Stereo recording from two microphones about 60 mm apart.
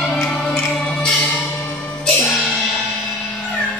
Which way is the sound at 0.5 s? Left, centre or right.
Centre.